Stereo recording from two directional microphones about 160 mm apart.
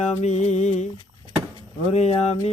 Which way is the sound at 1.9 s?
40° left (ahead or behind).